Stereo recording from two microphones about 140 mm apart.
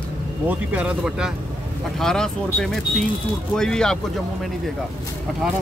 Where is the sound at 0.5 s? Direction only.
10° right (ahead or behind).